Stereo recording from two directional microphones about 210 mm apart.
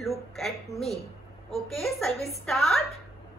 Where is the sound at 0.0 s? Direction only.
Centre (ahead or behind).